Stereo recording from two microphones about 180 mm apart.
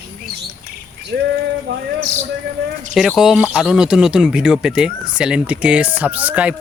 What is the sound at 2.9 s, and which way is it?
Speech, centre (ahead or behind).